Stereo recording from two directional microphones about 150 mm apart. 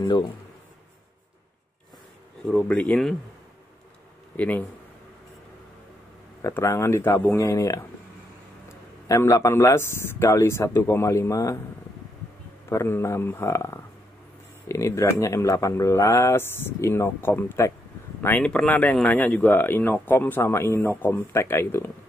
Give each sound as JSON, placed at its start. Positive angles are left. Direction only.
{"t": 0.0, "sound": "speech", "side_deg": 30}
{"t": 2.4, "sound": "speech", "side_deg": 10}
{"t": 4.4, "sound": "speech", "side_deg": 10}
{"t": 6.4, "sound": "speech", "side_deg": 20}
{"t": 9.0, "sound": "speech", "side_deg": 20}
{"t": 12.6, "sound": "speech", "side_deg": 15}